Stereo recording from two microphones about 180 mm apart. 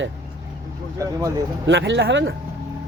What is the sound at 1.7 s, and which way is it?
Speech, 75° right (ahead or behind).